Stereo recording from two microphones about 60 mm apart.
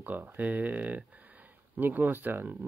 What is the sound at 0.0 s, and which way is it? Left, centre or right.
Speech, right.